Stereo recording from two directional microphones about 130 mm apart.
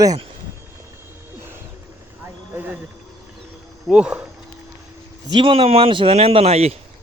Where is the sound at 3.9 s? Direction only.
10° right (ahead or behind).